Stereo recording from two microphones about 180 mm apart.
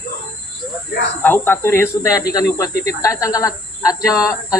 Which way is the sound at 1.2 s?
10° left (ahead or behind).